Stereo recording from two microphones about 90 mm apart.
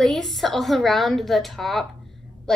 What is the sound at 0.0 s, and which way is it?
A woman's voice, centre (ahead or behind).